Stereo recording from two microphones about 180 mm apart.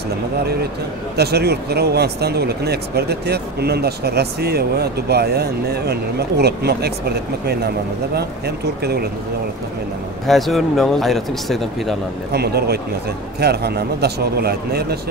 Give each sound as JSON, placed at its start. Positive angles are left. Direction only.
{"t": 1.1, "sound": "speech", "side_deg": -65}
{"t": 10.2, "sound": "speech", "side_deg": 0}
{"t": 12.3, "sound": "speech", "side_deg": -60}